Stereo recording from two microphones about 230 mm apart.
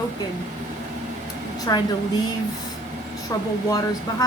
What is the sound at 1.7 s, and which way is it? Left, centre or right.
Speech, centre.